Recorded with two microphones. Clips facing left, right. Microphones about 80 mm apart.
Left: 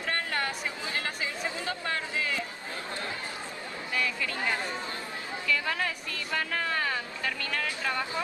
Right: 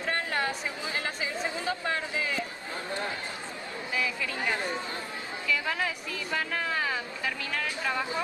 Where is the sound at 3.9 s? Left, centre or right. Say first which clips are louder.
Even; centre.